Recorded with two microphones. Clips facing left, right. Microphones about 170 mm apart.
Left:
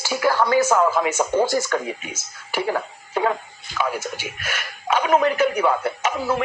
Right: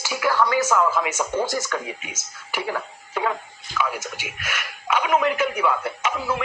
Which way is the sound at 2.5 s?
35° left (ahead or behind).